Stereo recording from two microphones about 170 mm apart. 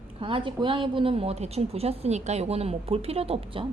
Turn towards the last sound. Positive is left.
turn(degrees=-35)  # may be behind; listen again after turning